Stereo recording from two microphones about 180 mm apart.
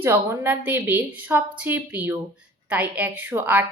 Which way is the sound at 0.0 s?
15° right (ahead or behind).